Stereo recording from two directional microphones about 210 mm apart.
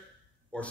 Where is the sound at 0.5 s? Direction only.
5° left (ahead or behind).